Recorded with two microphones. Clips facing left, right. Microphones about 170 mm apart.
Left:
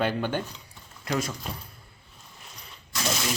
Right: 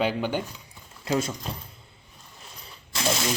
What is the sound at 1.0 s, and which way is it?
Speech, 25° right (ahead or behind).